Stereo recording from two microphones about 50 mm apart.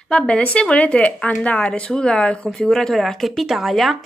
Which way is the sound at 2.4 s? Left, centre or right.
Centre.